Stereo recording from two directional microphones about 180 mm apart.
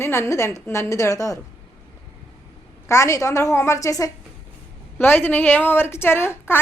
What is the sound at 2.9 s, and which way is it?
A woman's voice, 15° left (ahead or behind).